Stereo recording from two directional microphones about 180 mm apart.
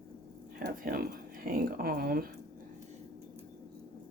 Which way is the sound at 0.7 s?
50° right (ahead or behind).